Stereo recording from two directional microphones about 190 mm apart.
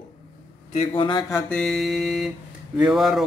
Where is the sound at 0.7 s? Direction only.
30° left (ahead or behind).